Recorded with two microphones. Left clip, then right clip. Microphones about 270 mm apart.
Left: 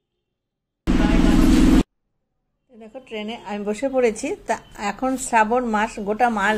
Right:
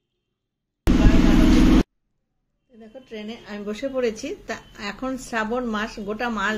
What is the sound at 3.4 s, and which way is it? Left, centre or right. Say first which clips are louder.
A woman's voice: left 5 dB; centre.